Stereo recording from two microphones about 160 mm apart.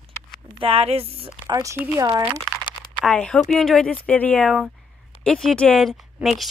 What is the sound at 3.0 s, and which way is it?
Speech, 5° left (ahead or behind).